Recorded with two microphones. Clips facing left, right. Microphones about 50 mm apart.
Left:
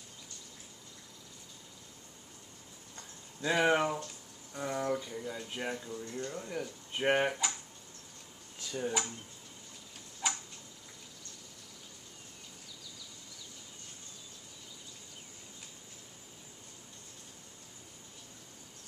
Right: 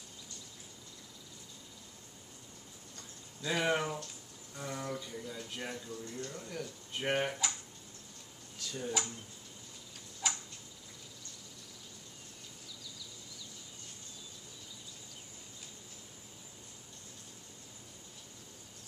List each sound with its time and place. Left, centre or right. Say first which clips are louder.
3.0 s a sound: left 6 dB; left
4.6 s speech: left 6 dB; centre
8.5 s speech: left 3 dB; centre
10.2 s tick-tock: left 2 dB; centre